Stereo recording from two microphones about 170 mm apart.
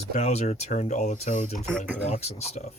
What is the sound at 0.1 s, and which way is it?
Speech, 40° left (ahead or behind).